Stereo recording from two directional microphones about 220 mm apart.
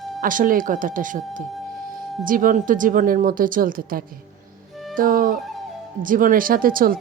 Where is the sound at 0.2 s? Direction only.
40° right (ahead or behind).